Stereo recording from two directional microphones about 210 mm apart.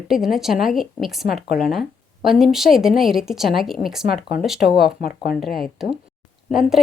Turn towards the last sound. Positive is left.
turn(degrees=0)  # may be behind; listen again after turning